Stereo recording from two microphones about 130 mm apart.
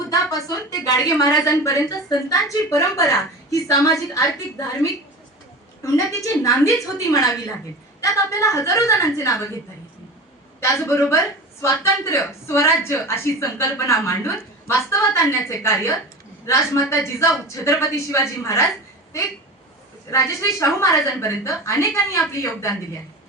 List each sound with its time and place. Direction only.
0.1 s a woman's voice: 25° left (ahead or behind)
10.6 s a woman's voice: 20° left (ahead or behind)